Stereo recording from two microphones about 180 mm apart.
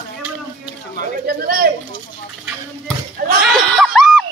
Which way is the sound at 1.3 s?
55° right (ahead or behind).